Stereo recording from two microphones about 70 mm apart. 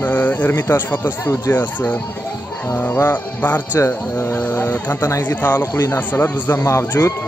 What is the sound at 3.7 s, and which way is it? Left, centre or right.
Speech, left.